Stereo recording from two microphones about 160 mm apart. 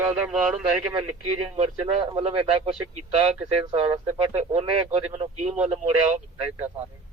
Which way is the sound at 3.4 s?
30° right (ahead or behind).